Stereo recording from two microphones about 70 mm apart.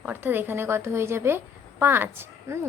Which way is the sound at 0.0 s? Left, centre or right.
Right.